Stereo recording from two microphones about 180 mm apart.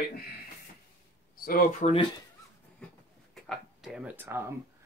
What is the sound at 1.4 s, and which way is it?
Speech, 55° left (ahead or behind).